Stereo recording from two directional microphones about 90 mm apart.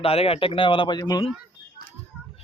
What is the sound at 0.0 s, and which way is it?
A man's voice, 90° left.